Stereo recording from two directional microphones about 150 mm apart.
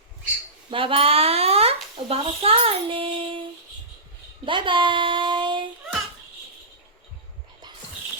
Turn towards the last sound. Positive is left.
turn(degrees=-30)  # may be behind; listen again after turning